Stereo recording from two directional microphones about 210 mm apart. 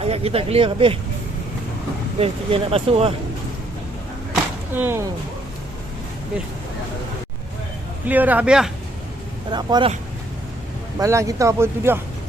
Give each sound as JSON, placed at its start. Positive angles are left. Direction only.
{"t": 0.0, "sound": "speech", "side_deg": -30}
{"t": 2.1, "sound": "speech", "side_deg": -30}
{"t": 4.7, "sound": "speech", "side_deg": -10}
{"t": 8.0, "sound": "speech", "side_deg": -10}
{"t": 9.5, "sound": "speech", "side_deg": -20}
{"t": 11.0, "sound": "speech", "side_deg": -15}